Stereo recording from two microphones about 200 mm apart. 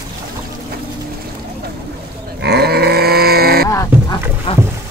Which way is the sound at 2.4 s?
55° right (ahead or behind).